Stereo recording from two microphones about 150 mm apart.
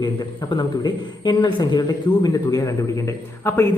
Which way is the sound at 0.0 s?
30° left (ahead or behind).